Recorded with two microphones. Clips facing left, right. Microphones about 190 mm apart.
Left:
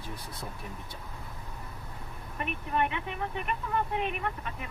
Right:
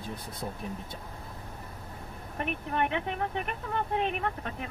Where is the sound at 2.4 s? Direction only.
55° right (ahead or behind).